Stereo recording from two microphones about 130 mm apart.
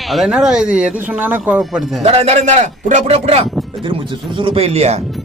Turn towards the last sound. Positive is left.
turn(degrees=-55)  # may be behind; listen again after turning